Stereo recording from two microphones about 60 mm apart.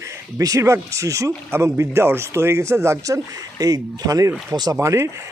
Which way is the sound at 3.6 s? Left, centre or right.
Right.